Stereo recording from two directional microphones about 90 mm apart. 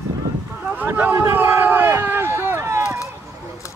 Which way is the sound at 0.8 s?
20° right (ahead or behind).